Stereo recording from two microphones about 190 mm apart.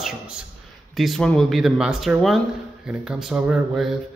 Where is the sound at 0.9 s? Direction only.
Centre (ahead or behind).